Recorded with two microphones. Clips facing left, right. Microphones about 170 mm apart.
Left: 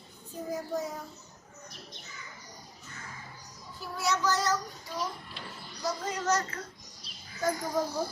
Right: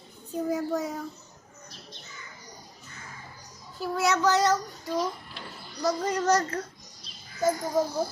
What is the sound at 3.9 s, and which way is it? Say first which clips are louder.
Child singing: right 6 dB; 70° right (ahead or behind).